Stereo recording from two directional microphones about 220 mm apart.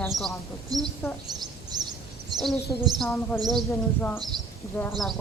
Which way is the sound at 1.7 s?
20° right (ahead or behind).